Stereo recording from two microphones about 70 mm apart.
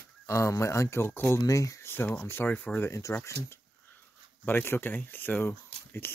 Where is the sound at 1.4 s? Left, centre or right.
Left.